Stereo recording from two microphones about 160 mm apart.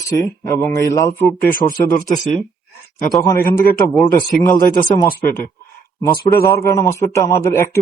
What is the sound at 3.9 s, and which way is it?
Speech, centre (ahead or behind).